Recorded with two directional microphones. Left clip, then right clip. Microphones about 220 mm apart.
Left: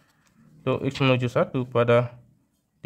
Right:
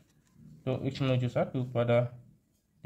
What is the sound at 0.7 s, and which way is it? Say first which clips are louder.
Speech: left 9 dB; 35° left (ahead or behind).